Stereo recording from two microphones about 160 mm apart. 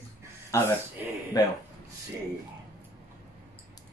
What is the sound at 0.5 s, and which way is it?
Speech, 15° left (ahead or behind).